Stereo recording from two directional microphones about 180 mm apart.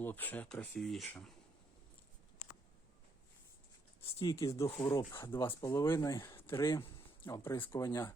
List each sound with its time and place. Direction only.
0.0 s speech: 10° left (ahead or behind)
4.2 s speech: 20° left (ahead or behind)